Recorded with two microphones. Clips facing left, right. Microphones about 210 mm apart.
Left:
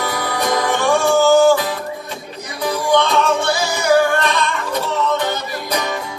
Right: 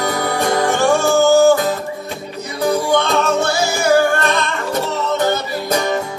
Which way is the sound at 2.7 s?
45° right (ahead or behind).